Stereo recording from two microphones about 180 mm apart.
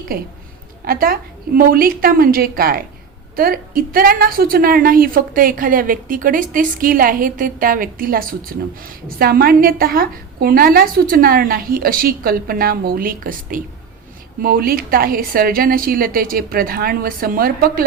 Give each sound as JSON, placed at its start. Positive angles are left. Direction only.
{"t": 0.1, "sound": "a woman's voice", "side_deg": -55}